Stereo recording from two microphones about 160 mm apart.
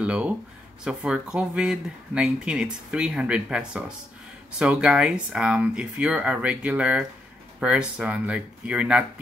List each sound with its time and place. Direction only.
0.0 s speech: 5° right (ahead or behind)